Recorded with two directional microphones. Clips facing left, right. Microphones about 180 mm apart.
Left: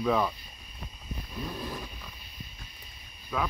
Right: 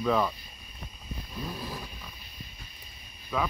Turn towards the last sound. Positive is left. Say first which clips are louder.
# right 1 dB
turn(degrees=5)  # may be behind; listen again after turning